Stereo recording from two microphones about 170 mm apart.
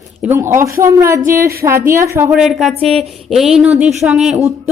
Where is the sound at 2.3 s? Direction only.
Centre (ahead or behind).